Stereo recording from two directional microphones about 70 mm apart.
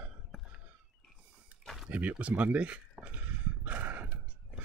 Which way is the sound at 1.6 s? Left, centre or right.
Centre.